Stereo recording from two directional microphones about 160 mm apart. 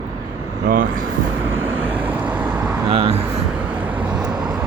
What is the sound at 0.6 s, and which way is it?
Speech, 60° right (ahead or behind).